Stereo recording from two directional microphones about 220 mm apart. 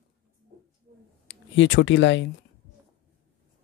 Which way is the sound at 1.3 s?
55° left (ahead or behind).